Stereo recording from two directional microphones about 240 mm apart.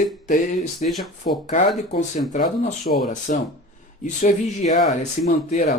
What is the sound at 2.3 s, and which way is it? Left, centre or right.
Speech, left.